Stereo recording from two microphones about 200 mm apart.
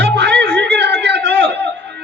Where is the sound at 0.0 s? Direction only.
55° right (ahead or behind).